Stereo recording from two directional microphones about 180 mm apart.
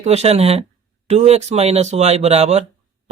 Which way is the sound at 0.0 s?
35° right (ahead or behind).